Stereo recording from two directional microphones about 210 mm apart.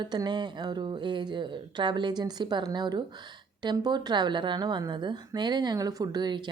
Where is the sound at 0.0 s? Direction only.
20° right (ahead or behind).